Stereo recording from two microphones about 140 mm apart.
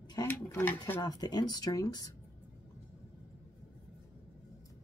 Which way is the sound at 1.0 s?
30° left (ahead or behind).